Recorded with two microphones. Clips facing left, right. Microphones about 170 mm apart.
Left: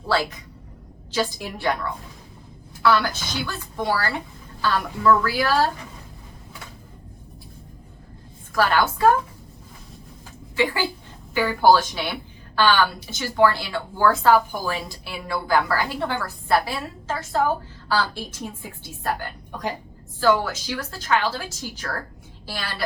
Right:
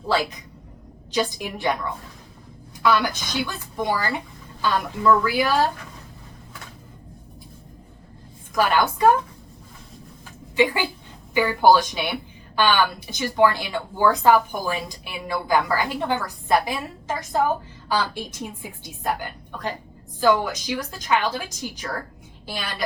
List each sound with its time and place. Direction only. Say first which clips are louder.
0.1 s a woman's voice: even; 15° right (ahead or behind)
2.8 s a woman's voice: even; 15° right (ahead or behind)
8.5 s a woman's voice: even; 15° right (ahead or behind)
10.5 s a woman's voice: right 2 dB; 20° right (ahead or behind)